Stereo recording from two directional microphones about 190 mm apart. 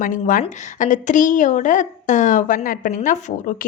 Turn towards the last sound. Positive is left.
turn(degrees=45)  # may be behind; listen again after turning